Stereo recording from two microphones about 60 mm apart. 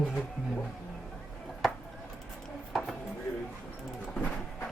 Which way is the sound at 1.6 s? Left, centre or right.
Centre.